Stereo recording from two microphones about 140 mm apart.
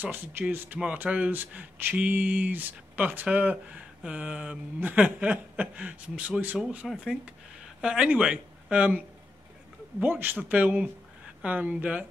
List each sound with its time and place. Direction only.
0.0 s speech: 15° right (ahead or behind)
10.0 s speech: 15° right (ahead or behind)